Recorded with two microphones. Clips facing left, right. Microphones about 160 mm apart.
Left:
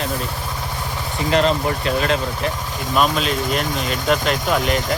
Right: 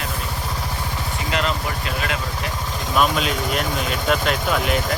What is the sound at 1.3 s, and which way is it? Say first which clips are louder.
Speech: left 7 dB; 35° left (ahead or behind).